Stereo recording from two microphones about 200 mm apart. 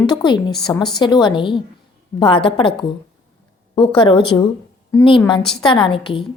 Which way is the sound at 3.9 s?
25° left (ahead or behind).